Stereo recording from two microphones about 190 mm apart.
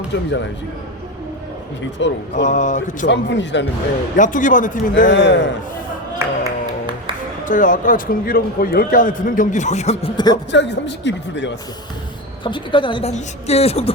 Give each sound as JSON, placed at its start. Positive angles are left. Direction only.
{"t": 0.1, "sound": "speech", "side_deg": 65}
{"t": 2.0, "sound": "speech", "side_deg": 75}
{"t": 2.3, "sound": "speech", "side_deg": 40}
{"t": 3.1, "sound": "speech", "side_deg": 65}
{"t": 4.2, "sound": "a man's voice", "side_deg": 45}
{"t": 5.0, "sound": "speech", "side_deg": 65}
{"t": 6.1, "sound": "music", "side_deg": -15}
{"t": 7.4, "sound": "a man's voice", "side_deg": 45}
{"t": 10.5, "sound": "speech", "side_deg": 65}
{"t": 12.4, "sound": "speech", "side_deg": 25}